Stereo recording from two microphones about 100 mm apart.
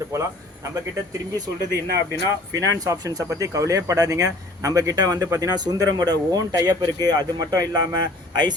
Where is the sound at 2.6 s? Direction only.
35° right (ahead or behind).